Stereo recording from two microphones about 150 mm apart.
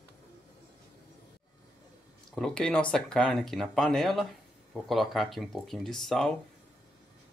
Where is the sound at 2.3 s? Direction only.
5° left (ahead or behind).